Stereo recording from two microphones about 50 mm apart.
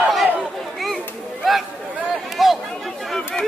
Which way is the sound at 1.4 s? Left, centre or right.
Centre.